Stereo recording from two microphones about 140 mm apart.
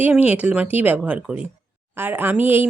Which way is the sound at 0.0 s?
10° right (ahead or behind).